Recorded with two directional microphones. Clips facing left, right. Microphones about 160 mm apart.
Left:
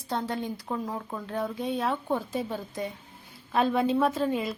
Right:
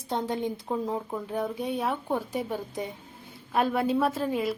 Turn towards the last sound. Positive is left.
turn(degrees=-5)  # may be behind; listen again after turning